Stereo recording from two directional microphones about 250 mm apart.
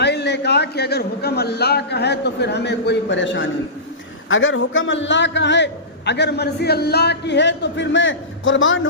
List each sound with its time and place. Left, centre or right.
0.0 s a man's voice: left